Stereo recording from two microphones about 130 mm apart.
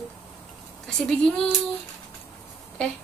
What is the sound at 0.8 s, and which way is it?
Speech, 5° left (ahead or behind).